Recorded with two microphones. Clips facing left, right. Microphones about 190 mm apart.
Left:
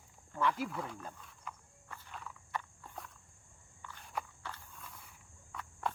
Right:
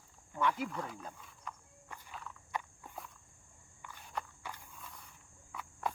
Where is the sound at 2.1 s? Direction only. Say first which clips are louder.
Even; centre (ahead or behind).